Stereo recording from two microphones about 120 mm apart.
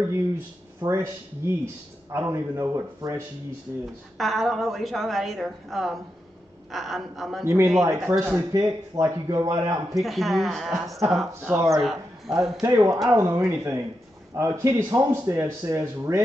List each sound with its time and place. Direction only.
0.8 s speech: 25° right (ahead or behind)
4.2 s a woman's voice: centre (ahead or behind)
7.4 s speech: 20° right (ahead or behind)
8.5 s speech: 30° right (ahead or behind)
9.9 s a woman's voice: centre (ahead or behind)
11.5 s speech: 25° right (ahead or behind)
11.8 s a man's voice: centre (ahead or behind)
12.6 s speech: 25° right (ahead or behind)